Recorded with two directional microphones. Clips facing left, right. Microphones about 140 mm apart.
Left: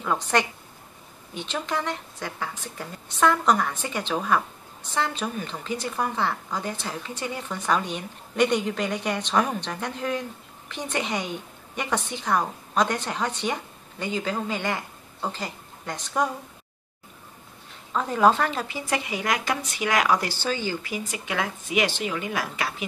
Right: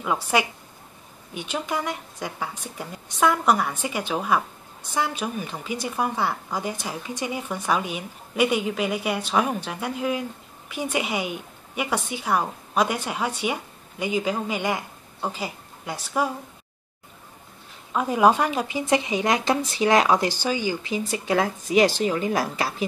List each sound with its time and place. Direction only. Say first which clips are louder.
0.0 s a woman's voice: right 1 dB; 10° right (ahead or behind)
17.9 s a woman's voice: right 2 dB; 10° right (ahead or behind)
21.3 s a woman's voice: right 6 dB; 35° right (ahead or behind)